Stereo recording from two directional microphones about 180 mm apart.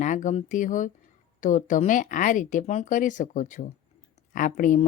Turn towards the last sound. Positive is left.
turn(degrees=45)  # may be behind; listen again after turning